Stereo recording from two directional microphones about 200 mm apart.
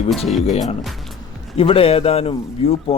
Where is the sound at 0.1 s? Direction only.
Centre (ahead or behind).